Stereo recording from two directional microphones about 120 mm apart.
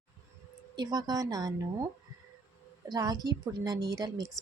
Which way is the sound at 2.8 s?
30° right (ahead or behind).